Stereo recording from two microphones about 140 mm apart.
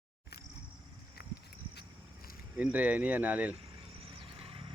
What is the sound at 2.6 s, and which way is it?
Speech, 10° right (ahead or behind).